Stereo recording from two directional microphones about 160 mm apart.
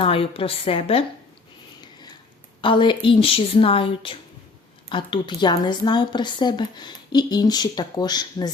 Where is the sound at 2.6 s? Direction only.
30° left (ahead or behind).